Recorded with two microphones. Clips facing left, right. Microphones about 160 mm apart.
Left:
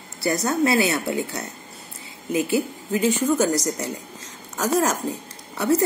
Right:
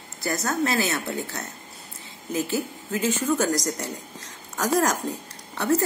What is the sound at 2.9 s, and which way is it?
Speech, 10° left (ahead or behind).